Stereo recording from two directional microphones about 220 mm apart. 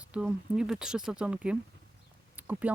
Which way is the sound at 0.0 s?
5° right (ahead or behind).